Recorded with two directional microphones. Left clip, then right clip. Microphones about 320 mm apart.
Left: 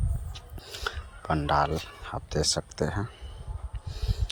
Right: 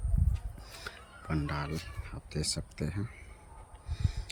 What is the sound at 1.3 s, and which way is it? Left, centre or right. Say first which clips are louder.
Speech: left 12 dB; centre.